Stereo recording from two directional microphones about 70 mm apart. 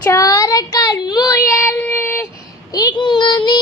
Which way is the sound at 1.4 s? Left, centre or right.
Left.